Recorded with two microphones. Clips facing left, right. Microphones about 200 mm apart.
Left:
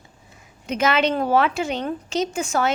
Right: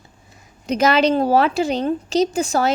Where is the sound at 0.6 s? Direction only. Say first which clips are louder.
Right 4 dB; 35° right (ahead or behind).